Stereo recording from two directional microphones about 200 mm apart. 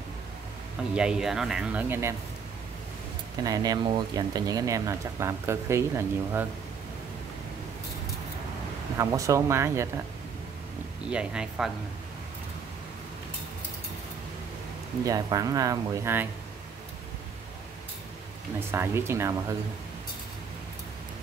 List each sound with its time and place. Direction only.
0.9 s speech: 5° right (ahead or behind)
3.4 s speech: 20° right (ahead or behind)
8.9 s speech: 15° right (ahead or behind)
11.1 s speech: 5° right (ahead or behind)
15.0 s speech: 20° right (ahead or behind)
18.7 s speech: 10° right (ahead or behind)